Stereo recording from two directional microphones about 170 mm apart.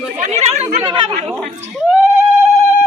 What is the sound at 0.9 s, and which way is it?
Speech, 30° right (ahead or behind).